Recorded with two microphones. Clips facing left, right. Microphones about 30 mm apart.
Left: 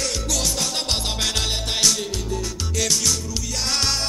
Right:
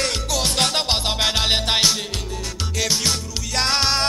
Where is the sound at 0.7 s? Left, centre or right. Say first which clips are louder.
Right 4 dB; right.